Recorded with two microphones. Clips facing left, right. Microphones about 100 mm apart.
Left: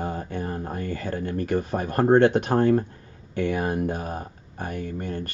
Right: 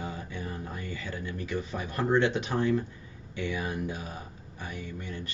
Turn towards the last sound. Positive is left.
turn(degrees=50)  # may be behind; listen again after turning